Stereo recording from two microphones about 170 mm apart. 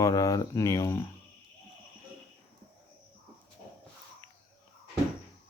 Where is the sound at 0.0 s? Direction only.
20° left (ahead or behind).